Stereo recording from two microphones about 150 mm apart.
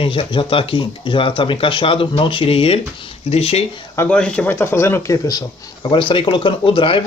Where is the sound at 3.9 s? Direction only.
15° left (ahead or behind).